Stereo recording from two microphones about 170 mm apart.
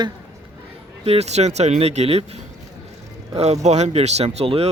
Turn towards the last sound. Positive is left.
turn(degrees=-35)  # may be behind; listen again after turning